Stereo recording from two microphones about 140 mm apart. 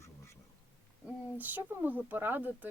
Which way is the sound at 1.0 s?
15° right (ahead or behind).